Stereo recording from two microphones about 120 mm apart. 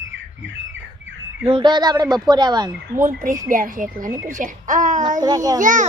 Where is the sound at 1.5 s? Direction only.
40° right (ahead or behind).